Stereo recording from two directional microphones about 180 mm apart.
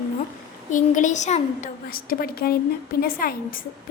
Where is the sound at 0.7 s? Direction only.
45° left (ahead or behind).